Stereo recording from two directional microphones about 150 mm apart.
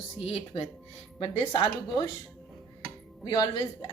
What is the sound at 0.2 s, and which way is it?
A woman's voice, 40° left (ahead or behind).